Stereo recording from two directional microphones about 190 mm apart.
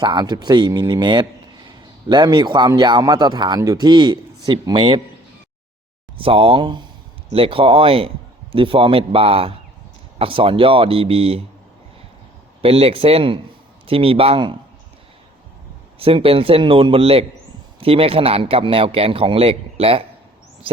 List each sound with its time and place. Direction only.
0.0 s a man's voice: 25° right (ahead or behind)
6.1 s a man's voice: 30° right (ahead or behind)
12.6 s a man's voice: 30° right (ahead or behind)
16.0 s a man's voice: 30° right (ahead or behind)